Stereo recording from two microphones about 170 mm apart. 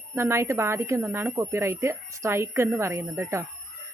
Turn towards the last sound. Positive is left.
turn(degrees=-15)  # may be behind; listen again after turning